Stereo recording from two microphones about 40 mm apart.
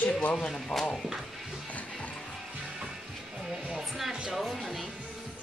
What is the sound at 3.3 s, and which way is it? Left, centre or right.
Music, right.